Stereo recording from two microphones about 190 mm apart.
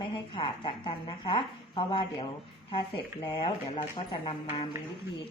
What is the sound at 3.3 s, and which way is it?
Speech, 25° left (ahead or behind).